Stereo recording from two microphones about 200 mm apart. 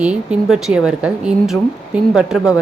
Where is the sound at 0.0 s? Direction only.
5° right (ahead or behind).